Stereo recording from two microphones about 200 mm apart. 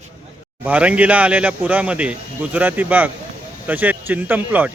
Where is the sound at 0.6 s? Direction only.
5° right (ahead or behind).